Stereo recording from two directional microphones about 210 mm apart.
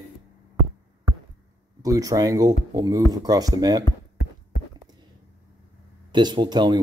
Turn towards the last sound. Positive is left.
turn(degrees=-20)  # may be behind; listen again after turning